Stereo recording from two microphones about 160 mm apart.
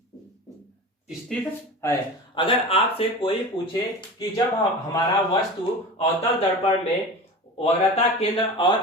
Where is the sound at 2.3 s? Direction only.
35° left (ahead or behind).